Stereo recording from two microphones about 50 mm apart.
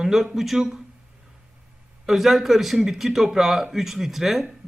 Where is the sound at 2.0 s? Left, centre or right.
Centre.